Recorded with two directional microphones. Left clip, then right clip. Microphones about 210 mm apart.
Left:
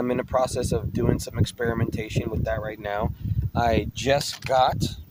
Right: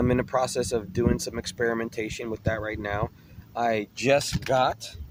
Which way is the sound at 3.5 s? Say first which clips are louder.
Left 3 dB; 30° left (ahead or behind).